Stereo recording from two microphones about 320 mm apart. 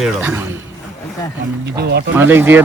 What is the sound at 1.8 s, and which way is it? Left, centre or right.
Speech, right.